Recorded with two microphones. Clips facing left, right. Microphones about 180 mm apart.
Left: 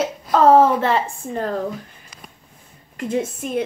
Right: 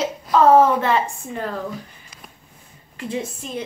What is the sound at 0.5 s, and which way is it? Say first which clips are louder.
A woman's voice: left 1 dB; 35° left (ahead or behind).